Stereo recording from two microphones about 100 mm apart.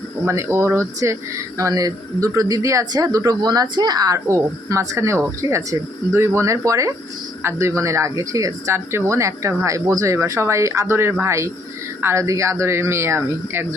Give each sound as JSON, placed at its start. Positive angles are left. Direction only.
{"t": 0.3, "sound": "speech", "side_deg": -25}